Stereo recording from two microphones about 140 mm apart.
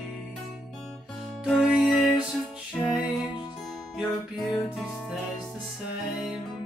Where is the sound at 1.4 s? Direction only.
Centre (ahead or behind).